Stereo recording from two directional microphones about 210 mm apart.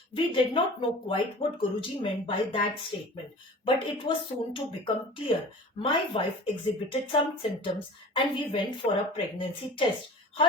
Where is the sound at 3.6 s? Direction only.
25° left (ahead or behind).